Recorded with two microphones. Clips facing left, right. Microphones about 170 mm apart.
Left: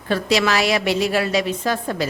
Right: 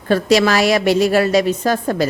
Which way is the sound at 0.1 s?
45° right (ahead or behind).